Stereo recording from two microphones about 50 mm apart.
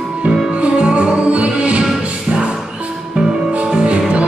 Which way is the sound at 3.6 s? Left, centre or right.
Centre.